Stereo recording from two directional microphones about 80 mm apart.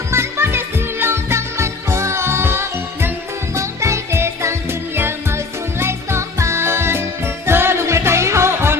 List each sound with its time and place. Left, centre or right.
0.1 s music: right
5.8 s music: right